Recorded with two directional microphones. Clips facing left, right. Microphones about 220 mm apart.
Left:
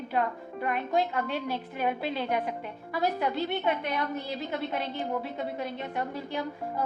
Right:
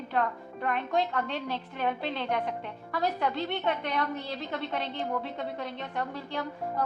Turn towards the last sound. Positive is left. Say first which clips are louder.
# even
turn(degrees=10)  # may be behind; listen again after turning